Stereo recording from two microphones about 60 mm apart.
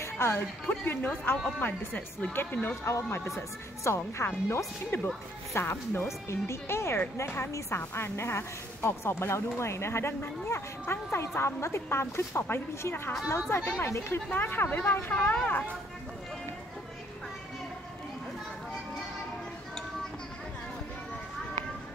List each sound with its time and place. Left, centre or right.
0.0 s music: left
0.7 s speech: left
2.9 s a woman's voice: left